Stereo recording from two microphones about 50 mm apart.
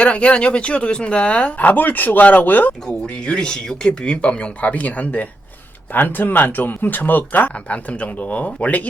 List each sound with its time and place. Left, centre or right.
0.0 s speech: left
2.9 s speech: centre